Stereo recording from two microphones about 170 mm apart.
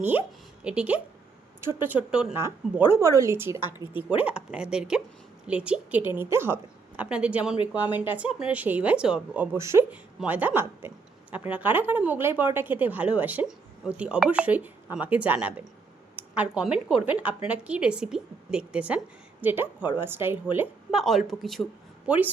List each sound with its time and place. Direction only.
0.0 s a woman's voice: 10° right (ahead or behind)
2.9 s speech: 20° right (ahead or behind)
21.0 s speech: centre (ahead or behind)